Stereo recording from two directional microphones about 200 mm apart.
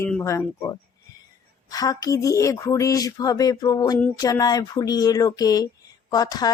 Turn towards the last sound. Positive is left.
turn(degrees=20)  # may be behind; listen again after turning